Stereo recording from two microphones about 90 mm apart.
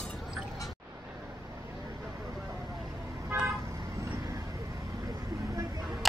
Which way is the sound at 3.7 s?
40° right (ahead or behind).